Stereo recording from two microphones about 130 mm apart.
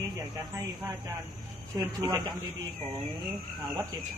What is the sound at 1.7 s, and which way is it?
Speech, 25° right (ahead or behind).